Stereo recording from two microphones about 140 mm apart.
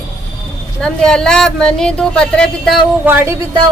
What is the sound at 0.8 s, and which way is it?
Speech, 5° left (ahead or behind).